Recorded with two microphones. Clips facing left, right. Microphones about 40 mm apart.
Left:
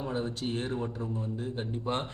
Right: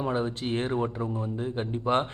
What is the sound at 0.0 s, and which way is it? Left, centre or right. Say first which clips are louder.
A man's voice: right 4 dB; right.